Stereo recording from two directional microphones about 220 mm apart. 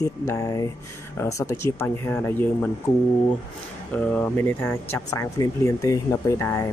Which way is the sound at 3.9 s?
5° left (ahead or behind).